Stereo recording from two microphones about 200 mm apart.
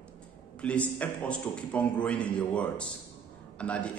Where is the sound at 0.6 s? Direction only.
5° left (ahead or behind).